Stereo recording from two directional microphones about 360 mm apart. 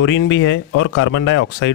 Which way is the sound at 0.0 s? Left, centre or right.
Left.